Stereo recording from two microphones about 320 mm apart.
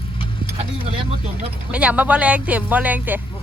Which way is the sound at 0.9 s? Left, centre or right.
Centre.